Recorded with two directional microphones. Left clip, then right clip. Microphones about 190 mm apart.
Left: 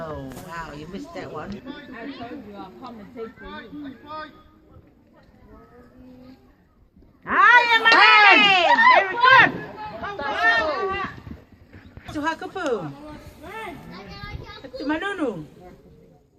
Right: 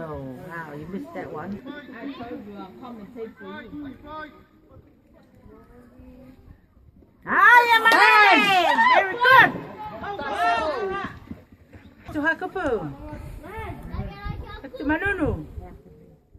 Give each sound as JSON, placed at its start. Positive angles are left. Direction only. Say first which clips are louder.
{"t": 1.1, "sound": "speech", "louder": "left 1 dB", "side_deg": -35}
{"t": 3.4, "sound": "speech", "louder": "even", "side_deg": -15}
{"t": 7.3, "sound": "a sound", "louder": "even", "side_deg": -60}
{"t": 10.0, "sound": "chatter", "louder": "left 2 dB", "side_deg": -55}
{"t": 12.1, "sound": "speech", "louder": "right 2 dB", "side_deg": -50}
{"t": 14.2, "sound": "a sound", "louder": "even", "side_deg": -50}